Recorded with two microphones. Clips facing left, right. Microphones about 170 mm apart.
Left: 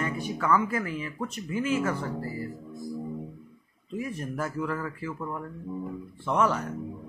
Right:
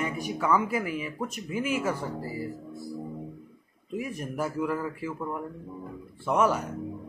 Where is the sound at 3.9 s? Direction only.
10° right (ahead or behind).